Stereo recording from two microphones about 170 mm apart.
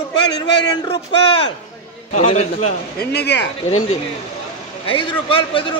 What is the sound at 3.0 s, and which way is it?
Speech, 70° left (ahead or behind).